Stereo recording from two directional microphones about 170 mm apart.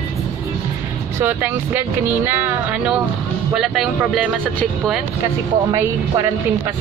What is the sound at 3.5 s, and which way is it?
Speech, centre (ahead or behind).